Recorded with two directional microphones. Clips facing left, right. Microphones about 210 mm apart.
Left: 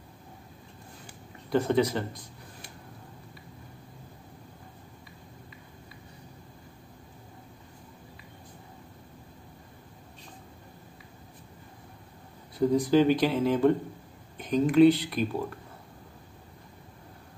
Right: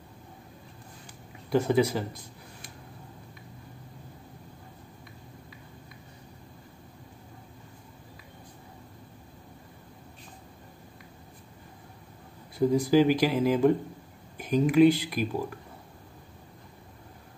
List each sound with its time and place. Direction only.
1.5 s speech: 10° right (ahead or behind)
12.5 s speech: 10° right (ahead or behind)